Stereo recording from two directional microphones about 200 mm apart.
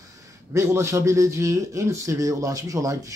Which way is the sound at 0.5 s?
15° right (ahead or behind).